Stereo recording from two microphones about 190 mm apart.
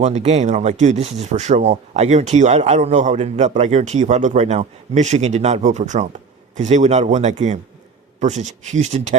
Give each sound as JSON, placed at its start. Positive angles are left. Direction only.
{"t": 0.0, "sound": "speech", "side_deg": -35}